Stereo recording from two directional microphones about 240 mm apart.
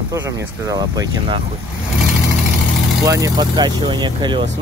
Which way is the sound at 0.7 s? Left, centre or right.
Centre.